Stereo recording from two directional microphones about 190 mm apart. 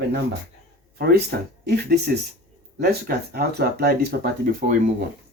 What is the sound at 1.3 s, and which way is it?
Speech, 60° right (ahead or behind).